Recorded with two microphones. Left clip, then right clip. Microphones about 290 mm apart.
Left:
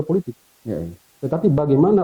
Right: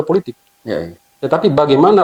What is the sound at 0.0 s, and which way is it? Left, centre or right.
Speech, centre.